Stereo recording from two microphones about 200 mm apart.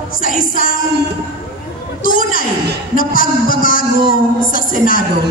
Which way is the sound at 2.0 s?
45° left (ahead or behind).